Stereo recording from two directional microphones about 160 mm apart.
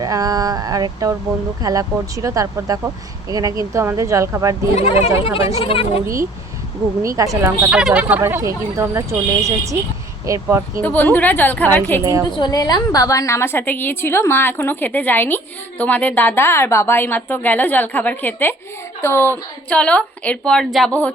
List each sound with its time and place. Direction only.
0.0 s speech: 20° right (ahead or behind)
4.7 s speech: 40° left (ahead or behind)
7.0 s speech: 20° right (ahead or behind)
7.7 s speech: 5° right (ahead or behind); by 10.6 s 20° right (ahead or behind)
10.8 s a woman's voice: 10° left (ahead or behind)
12.4 s a woman's voice: 25° left (ahead or behind); by 21.1 s 5° left (ahead or behind)